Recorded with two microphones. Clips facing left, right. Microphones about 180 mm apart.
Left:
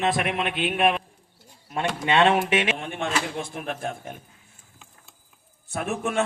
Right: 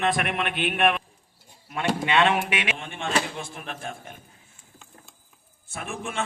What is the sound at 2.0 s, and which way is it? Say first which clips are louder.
A man's voice: left 3 dB; 30° left (ahead or behind).